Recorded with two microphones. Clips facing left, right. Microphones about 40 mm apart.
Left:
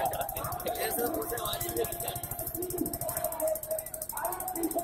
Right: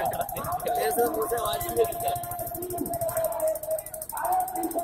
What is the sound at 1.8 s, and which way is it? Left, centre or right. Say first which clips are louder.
Music: right 10 dB; right.